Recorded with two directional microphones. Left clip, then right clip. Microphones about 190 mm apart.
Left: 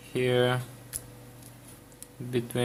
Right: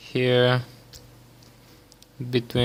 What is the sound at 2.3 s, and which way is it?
Mantra, 45° right (ahead or behind).